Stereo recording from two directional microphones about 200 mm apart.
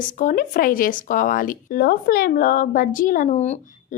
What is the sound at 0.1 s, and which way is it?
A woman's voice, 40° left (ahead or behind).